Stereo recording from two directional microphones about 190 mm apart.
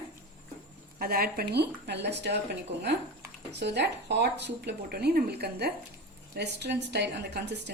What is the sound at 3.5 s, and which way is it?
A woman's voice, 65° right (ahead or behind).